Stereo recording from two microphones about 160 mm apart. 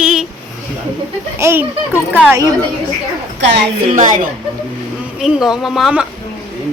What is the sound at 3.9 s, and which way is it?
Speech, 50° right (ahead or behind).